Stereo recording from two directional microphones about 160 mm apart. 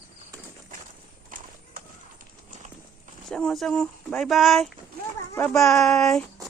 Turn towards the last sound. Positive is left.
turn(degrees=0)  # may be behind; listen again after turning